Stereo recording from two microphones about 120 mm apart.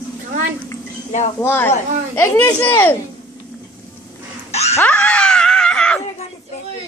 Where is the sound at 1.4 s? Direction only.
15° left (ahead or behind).